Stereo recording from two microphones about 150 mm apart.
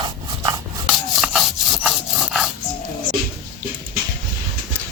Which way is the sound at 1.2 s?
Centre (ahead or behind).